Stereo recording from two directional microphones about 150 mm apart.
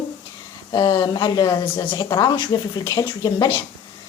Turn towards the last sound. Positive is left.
turn(degrees=30)  # may be behind; listen again after turning